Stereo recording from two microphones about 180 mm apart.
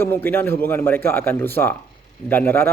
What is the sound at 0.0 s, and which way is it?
Speech, 10° left (ahead or behind).